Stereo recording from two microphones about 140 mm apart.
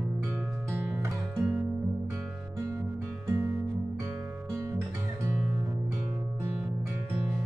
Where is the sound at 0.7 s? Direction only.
15° right (ahead or behind).